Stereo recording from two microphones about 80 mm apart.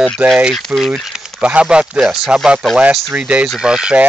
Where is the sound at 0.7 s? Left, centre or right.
Centre.